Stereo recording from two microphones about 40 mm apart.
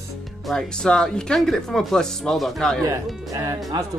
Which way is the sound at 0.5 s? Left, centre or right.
Centre.